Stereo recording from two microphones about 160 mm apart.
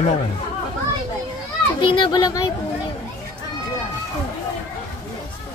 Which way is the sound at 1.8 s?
30° left (ahead or behind).